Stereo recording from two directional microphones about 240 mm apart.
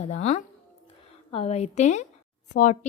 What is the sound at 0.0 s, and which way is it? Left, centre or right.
A woman's voice, left.